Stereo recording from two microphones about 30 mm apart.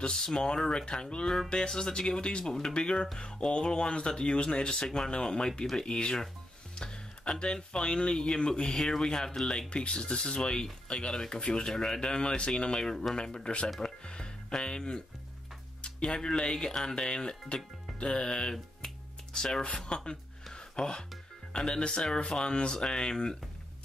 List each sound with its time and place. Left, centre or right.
0.1 s speech: left
1.2 s music: centre
1.7 s speech: left
6.7 s music: left
7.5 s speech: left
9.7 s speech: left
13.7 s music: left
14.8 s speech: left
20.5 s music: left
21.5 s speech: left